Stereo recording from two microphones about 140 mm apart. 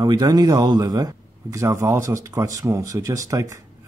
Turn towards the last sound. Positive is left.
turn(degrees=-20)  # may be behind; listen again after turning